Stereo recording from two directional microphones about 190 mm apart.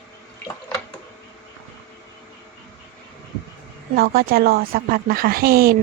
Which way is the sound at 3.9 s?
50° right (ahead or behind).